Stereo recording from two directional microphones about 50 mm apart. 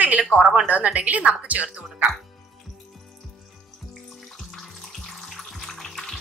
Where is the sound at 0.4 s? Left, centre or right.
Centre.